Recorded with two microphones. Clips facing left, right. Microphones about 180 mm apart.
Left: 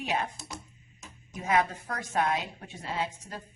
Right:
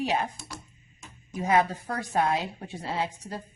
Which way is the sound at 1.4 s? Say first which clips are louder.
Right 3 dB; 35° right (ahead or behind).